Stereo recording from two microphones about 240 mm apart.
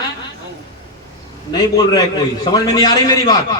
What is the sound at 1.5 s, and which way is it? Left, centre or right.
A man's voice, centre.